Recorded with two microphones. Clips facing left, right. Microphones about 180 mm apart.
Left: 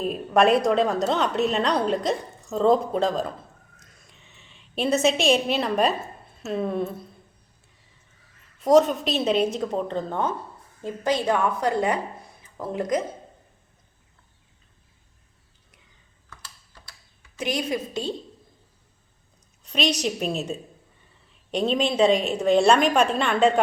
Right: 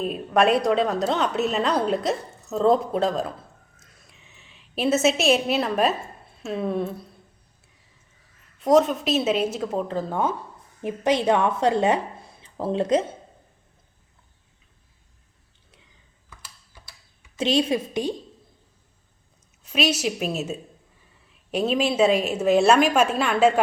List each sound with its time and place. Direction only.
0.0 s a woman's voice: centre (ahead or behind)
3.8 s a sound: centre (ahead or behind)
8.6 s a woman's voice: centre (ahead or behind)
10.8 s a woman's voice: 20° right (ahead or behind)
16.3 s typing: 10° right (ahead or behind)
17.3 s a woman's voice: 25° right (ahead or behind)
19.6 s a woman's voice: 5° right (ahead or behind)